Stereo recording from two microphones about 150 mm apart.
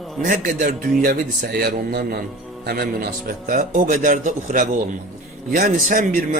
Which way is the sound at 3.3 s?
70° right (ahead or behind).